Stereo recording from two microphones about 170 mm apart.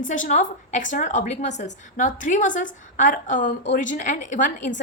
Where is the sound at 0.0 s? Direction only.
50° left (ahead or behind).